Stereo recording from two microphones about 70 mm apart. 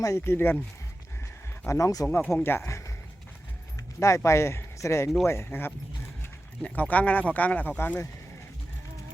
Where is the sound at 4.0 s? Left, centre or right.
Left.